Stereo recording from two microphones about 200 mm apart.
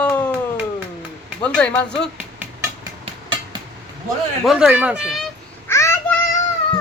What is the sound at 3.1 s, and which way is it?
Train, 20° right (ahead or behind).